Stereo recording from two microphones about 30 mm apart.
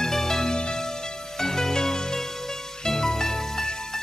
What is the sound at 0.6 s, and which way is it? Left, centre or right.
Music, left.